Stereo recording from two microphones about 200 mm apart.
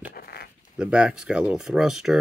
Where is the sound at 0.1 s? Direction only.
50° left (ahead or behind).